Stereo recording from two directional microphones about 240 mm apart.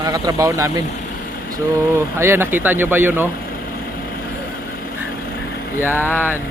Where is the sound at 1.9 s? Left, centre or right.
Centre.